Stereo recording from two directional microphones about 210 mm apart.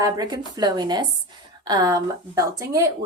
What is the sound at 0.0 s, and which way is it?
A woman's voice, 15° right (ahead or behind).